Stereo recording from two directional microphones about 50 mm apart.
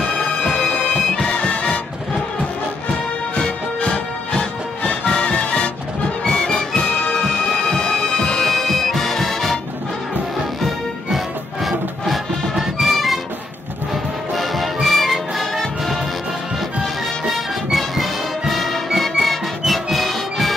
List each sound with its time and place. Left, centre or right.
0.6 s bagpipes: left
1.1 s music: centre
3.3 s music: left
6.2 s music: centre
8.5 s music: centre
11.1 s music: centre
14.3 s music: centre
17.6 s music: centre